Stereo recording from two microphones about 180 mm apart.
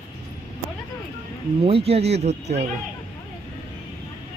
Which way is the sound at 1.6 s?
35° right (ahead or behind).